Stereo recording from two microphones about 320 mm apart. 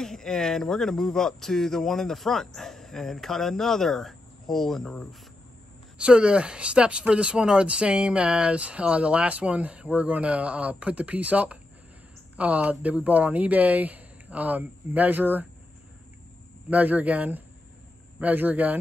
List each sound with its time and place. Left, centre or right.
0.0 s speech: centre
16.7 s speech: centre